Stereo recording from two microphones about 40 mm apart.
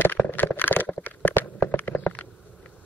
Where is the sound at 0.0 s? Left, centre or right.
Left.